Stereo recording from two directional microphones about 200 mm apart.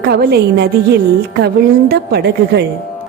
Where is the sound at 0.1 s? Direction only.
55° right (ahead or behind).